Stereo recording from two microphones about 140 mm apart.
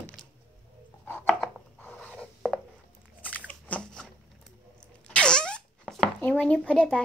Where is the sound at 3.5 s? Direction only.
10° left (ahead or behind).